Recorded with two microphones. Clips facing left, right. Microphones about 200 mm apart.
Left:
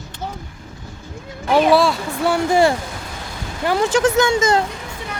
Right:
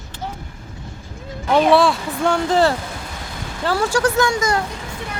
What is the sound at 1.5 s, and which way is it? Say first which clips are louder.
Speech: even; 5° left (ahead or behind).